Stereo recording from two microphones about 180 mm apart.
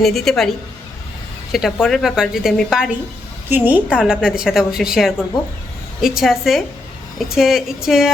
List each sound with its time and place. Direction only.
0.0 s a woman's voice: centre (ahead or behind)
1.5 s a woman's voice: centre (ahead or behind)